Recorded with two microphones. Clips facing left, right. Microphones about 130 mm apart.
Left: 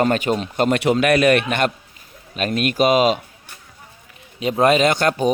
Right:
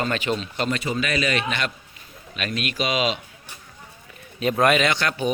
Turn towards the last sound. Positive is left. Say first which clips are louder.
# left 6 dB
turn(degrees=45)  # may be behind; listen again after turning